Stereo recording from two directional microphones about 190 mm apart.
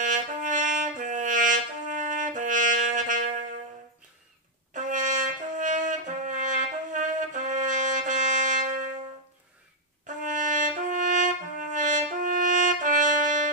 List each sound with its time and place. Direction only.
0.0 s brass instrument: 40° right (ahead or behind)
4.7 s brass instrument: 40° right (ahead or behind)
10.0 s brass instrument: 40° right (ahead or behind)